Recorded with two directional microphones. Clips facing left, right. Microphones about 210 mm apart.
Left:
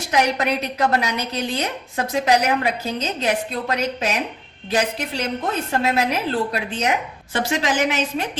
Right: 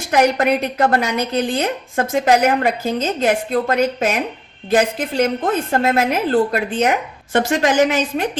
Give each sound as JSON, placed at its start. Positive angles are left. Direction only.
{"t": 0.1, "sound": "speech", "side_deg": -50}